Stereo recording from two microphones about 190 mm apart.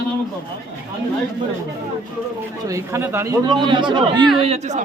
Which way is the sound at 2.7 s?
15° right (ahead or behind).